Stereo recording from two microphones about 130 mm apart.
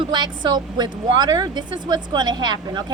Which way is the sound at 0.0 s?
35° right (ahead or behind).